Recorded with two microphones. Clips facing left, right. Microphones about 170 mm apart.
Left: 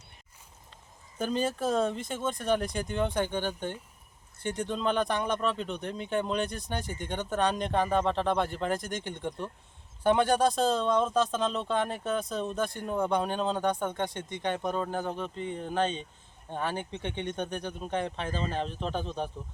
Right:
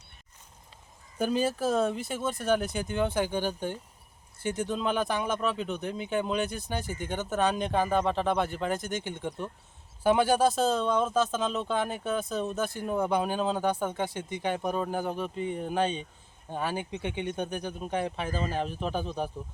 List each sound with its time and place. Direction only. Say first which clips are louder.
1.2 s speech: right 2 dB; 10° right (ahead or behind)